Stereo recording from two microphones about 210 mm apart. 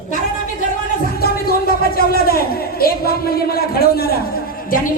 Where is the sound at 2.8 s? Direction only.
45° left (ahead or behind).